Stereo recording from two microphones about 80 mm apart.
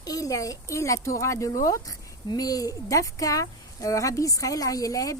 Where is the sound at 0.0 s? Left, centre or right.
Left.